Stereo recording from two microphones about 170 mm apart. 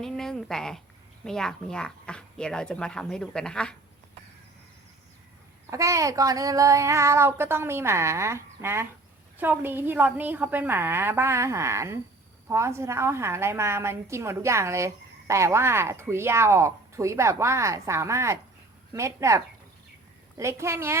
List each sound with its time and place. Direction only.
0.0 s speech: 5° left (ahead or behind)
5.7 s a woman's voice: 20° right (ahead or behind)